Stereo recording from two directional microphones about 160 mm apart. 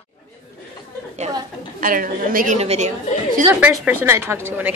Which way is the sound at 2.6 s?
40° right (ahead or behind).